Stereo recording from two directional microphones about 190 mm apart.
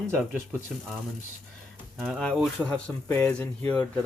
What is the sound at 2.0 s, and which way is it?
Speech, centre (ahead or behind).